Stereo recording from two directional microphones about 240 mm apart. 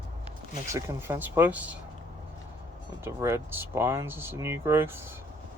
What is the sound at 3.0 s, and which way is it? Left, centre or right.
Speech, centre.